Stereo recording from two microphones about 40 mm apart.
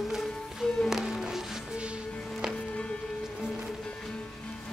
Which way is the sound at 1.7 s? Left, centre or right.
Right.